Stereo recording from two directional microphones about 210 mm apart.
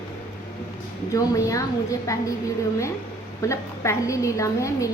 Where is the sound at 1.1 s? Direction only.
15° left (ahead or behind).